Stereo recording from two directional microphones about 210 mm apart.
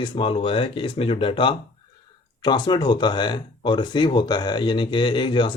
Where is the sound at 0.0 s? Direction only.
25° left (ahead or behind).